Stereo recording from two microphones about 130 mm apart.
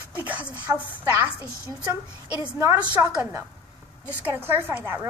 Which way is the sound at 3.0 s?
25° right (ahead or behind).